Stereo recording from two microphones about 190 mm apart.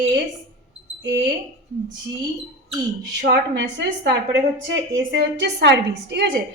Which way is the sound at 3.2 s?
65° right (ahead or behind).